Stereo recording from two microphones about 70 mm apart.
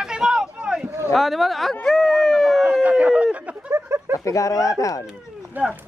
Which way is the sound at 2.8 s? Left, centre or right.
Centre.